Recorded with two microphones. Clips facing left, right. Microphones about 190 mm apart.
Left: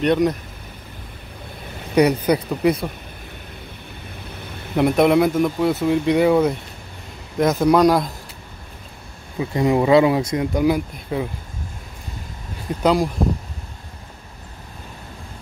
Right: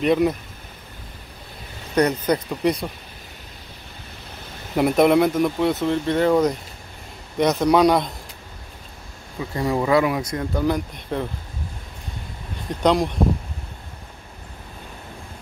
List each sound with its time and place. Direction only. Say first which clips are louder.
0.0 s speech: left 1 dB; centre (ahead or behind)
2.0 s speech: left 3 dB; 10° left (ahead or behind)
4.7 s speech: left 1 dB; centre (ahead or behind)
9.4 s speech: left 5 dB; 20° left (ahead or behind)
12.8 s speech: left 1 dB; 5° left (ahead or behind)